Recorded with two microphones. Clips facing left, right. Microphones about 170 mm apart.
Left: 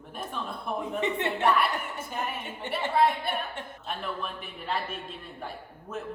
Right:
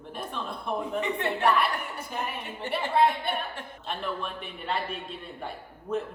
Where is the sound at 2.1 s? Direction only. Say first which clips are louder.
Even; centre (ahead or behind).